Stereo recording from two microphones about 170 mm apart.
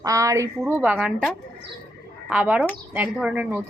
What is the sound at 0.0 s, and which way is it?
Speech, 20° right (ahead or behind).